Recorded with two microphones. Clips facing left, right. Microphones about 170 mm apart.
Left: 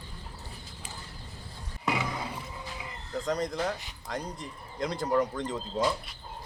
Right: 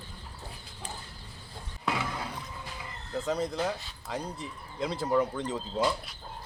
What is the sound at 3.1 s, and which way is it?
Speech, 5° right (ahead or behind).